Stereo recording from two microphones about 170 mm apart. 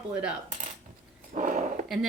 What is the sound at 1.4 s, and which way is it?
Dog, 50° right (ahead or behind).